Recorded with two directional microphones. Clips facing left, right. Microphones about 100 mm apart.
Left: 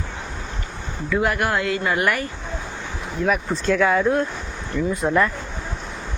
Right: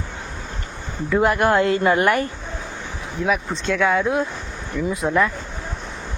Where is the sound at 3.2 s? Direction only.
Centre (ahead or behind).